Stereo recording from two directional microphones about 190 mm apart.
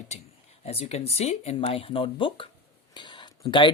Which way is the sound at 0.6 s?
35° left (ahead or behind).